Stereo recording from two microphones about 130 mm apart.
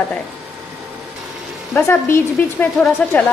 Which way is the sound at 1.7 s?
20° left (ahead or behind).